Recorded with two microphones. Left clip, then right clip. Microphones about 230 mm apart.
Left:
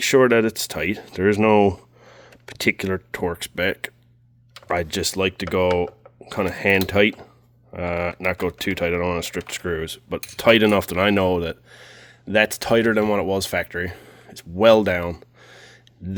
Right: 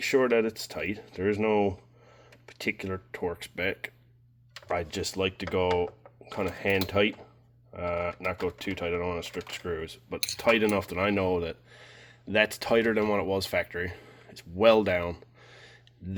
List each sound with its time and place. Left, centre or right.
0.0 s speech: left